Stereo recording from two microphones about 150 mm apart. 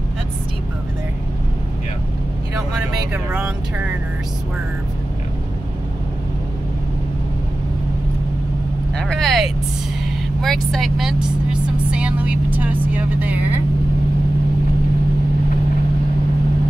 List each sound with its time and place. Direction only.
3.1 s speech: 10° right (ahead or behind)
8.9 s vehicle: 5° left (ahead or behind)
10.4 s speech: centre (ahead or behind)